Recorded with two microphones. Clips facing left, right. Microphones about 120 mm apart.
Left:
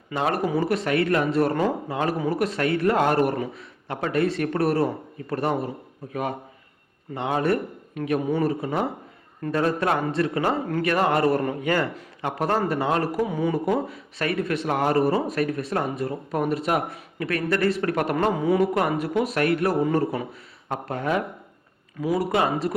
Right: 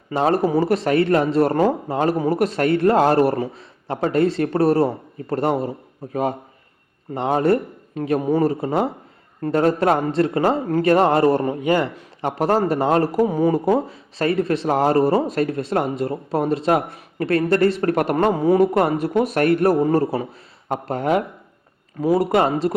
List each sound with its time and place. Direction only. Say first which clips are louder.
0.1 s speech: right 6 dB; 30° right (ahead or behind)
7.1 s a man's voice: right 5 dB; 35° right (ahead or behind)
19.1 s speech: right 5 dB; 50° right (ahead or behind)
19.8 s speech: right 4 dB; 35° right (ahead or behind)
22.4 s a man's voice: right 5 dB; 30° right (ahead or behind)